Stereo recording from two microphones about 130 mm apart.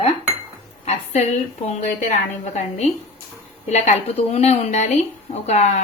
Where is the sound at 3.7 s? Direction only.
55° left (ahead or behind).